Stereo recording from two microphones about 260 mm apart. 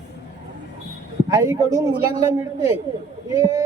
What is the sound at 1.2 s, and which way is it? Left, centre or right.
Speech, centre.